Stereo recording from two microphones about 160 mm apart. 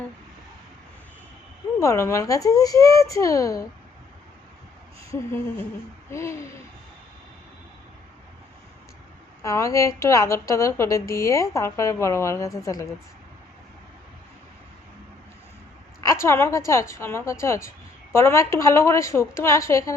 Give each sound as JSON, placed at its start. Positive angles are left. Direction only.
{"t": 1.8, "sound": "speech", "side_deg": 20}
{"t": 6.1, "sound": "a woman's voice", "side_deg": 15}
{"t": 9.4, "sound": "speech", "side_deg": 20}
{"t": 16.0, "sound": "a woman's voice", "side_deg": 15}